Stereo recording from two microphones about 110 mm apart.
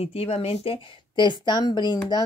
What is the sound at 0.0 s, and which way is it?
A woman's voice, 65° left (ahead or behind).